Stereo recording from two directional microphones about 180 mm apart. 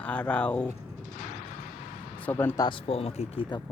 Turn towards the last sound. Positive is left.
turn(degrees=30)  # may be behind; listen again after turning